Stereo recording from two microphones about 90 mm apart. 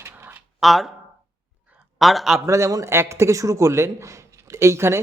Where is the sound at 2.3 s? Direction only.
35° right (ahead or behind).